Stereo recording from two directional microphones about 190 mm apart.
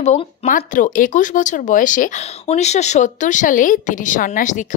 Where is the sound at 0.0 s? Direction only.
40° left (ahead or behind).